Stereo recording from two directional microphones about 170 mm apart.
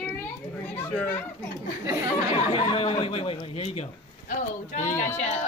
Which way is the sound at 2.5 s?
30° left (ahead or behind).